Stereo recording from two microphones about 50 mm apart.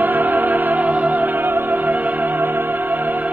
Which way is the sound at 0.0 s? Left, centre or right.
Right.